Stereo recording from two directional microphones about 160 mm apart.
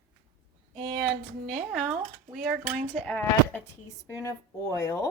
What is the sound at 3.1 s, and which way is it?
Speech, 10° left (ahead or behind).